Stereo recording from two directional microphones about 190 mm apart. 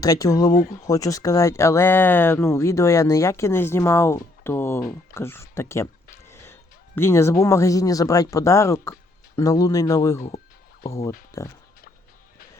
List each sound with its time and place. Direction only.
0.0 s speech: 20° left (ahead or behind)
6.2 s a sound: 15° left (ahead or behind)
7.4 s speech: 15° left (ahead or behind)